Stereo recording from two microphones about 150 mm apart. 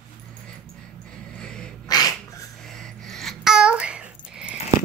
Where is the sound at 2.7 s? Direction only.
Centre (ahead or behind).